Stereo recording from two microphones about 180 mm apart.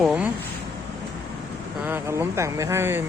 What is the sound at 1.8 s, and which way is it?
Speech, 10° right (ahead or behind).